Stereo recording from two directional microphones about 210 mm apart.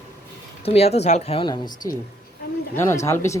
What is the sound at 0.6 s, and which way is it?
Speech, 30° left (ahead or behind).